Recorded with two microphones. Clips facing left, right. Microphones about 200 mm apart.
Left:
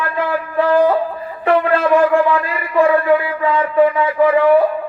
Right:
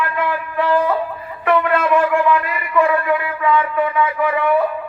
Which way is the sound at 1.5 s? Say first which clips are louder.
Left 2 dB; 30° left (ahead or behind).